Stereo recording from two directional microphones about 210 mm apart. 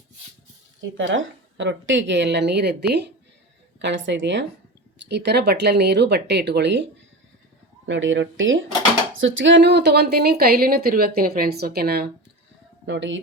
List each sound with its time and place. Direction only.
0.8 s a woman's voice: 65° right (ahead or behind)
7.9 s a woman's voice: 65° right (ahead or behind)
12.8 s speech: 60° right (ahead or behind)